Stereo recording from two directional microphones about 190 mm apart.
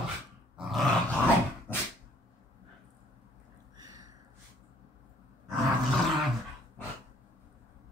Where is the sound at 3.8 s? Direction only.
20° right (ahead or behind).